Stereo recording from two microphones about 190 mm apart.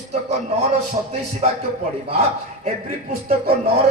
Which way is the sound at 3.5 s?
55° right (ahead or behind).